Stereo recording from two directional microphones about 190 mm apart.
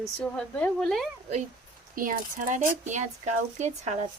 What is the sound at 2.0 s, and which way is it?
Speech, 45° right (ahead or behind).